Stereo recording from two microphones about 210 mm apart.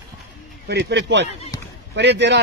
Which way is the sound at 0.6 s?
55° right (ahead or behind).